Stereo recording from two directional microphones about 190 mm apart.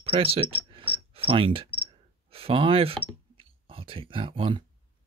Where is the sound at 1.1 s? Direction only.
30° right (ahead or behind).